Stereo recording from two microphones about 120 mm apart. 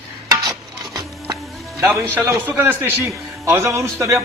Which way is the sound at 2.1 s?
20° right (ahead or behind).